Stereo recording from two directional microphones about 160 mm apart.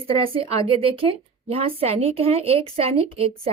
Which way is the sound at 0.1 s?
35° right (ahead or behind).